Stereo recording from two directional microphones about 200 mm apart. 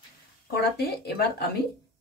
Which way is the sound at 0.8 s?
55° left (ahead or behind).